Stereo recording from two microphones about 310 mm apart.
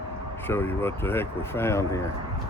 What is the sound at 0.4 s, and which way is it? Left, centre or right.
Speech, centre.